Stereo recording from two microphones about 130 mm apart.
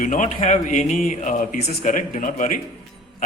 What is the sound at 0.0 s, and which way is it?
Speech, 85° left.